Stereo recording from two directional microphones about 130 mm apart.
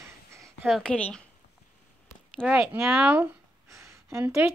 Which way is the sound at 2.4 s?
10° right (ahead or behind).